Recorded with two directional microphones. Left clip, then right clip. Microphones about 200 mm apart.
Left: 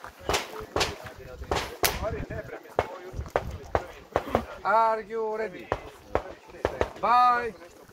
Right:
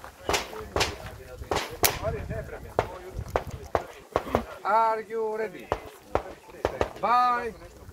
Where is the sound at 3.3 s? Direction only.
25° right (ahead or behind).